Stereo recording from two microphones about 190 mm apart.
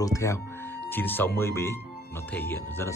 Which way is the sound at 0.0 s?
15° left (ahead or behind).